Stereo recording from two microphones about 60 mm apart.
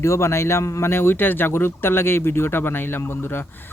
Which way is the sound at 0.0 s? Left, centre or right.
Left.